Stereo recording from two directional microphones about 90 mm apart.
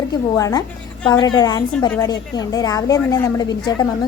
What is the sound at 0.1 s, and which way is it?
A woman's voice, 45° left (ahead or behind).